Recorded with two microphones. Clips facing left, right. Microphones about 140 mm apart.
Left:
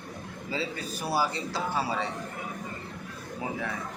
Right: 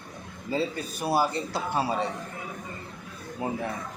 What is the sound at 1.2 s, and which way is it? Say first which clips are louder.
Speech: right 2 dB; 55° right (ahead or behind).